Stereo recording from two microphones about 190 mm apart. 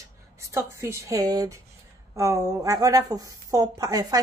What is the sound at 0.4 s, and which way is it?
A woman's voice, 15° right (ahead or behind).